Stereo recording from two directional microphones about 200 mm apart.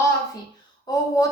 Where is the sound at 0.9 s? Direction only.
20° left (ahead or behind).